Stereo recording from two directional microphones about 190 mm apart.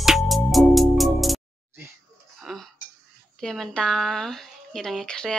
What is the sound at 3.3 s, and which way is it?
Speech, centre (ahead or behind).